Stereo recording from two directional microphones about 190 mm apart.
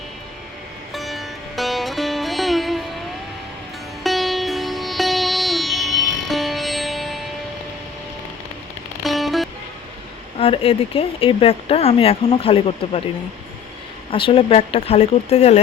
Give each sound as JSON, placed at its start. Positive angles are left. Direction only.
{"t": 0.9, "sound": "music", "side_deg": 0}
{"t": 4.0, "sound": "music", "side_deg": 0}
{"t": 9.0, "sound": "music", "side_deg": 0}
{"t": 10.3, "sound": "speech", "side_deg": 30}
{"t": 14.1, "sound": "speech", "side_deg": 30}